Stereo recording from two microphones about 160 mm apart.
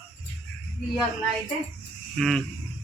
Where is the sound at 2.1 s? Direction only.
Centre (ahead or behind).